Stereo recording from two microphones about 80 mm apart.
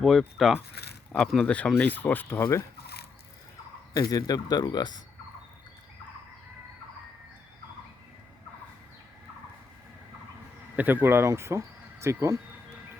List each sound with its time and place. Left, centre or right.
0.0 s speech: centre; by 2.6 s left
3.9 s speech: left
10.8 s speech: right